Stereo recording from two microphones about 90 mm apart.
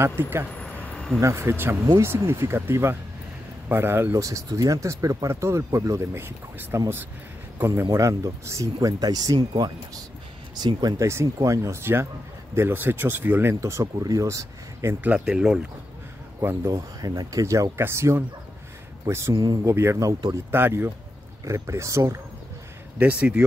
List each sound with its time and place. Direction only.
0.0 s speech: 25° right (ahead or behind)
0.6 s a sound: 15° left (ahead or behind)
1.2 s speech: 30° right (ahead or behind)
10.5 s speech: 50° right (ahead or behind)
11.1 s speech: 35° right (ahead or behind)
15.0 s speech: 10° right (ahead or behind)
16.4 s speech: 35° right (ahead or behind)
20.5 s speech: 25° right (ahead or behind)
22.9 s speech: 15° right (ahead or behind)